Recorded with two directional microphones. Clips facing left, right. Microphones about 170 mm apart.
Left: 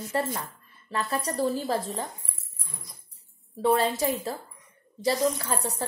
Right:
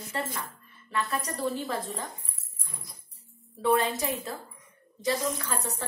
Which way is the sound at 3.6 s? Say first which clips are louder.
Left 2 dB; 35° left (ahead or behind).